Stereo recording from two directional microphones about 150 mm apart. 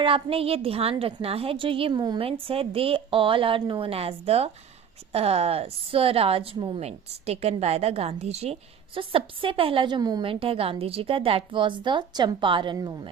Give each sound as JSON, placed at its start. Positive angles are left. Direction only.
{"t": 0.0, "sound": "a woman's voice", "side_deg": -40}